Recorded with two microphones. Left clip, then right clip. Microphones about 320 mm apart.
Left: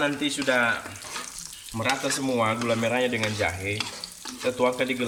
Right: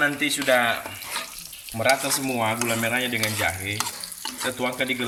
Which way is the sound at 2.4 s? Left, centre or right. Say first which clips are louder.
Even; centre.